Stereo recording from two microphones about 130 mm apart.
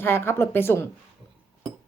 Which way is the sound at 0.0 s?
20° left (ahead or behind).